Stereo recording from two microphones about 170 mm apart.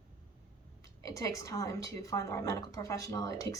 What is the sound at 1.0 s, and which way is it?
A woman's voice, 20° left (ahead or behind).